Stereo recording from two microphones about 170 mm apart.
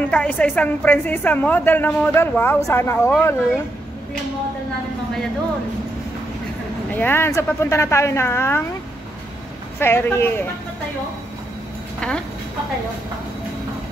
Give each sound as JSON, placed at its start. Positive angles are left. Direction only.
{"t": 0.0, "sound": "a woman's voice", "side_deg": 10}
{"t": 6.9, "sound": "a woman's voice", "side_deg": 10}
{"t": 9.8, "sound": "a woman's voice", "side_deg": 15}
{"t": 12.0, "sound": "speech", "side_deg": 5}